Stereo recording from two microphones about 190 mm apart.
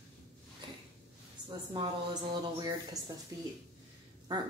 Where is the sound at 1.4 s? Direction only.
25° right (ahead or behind).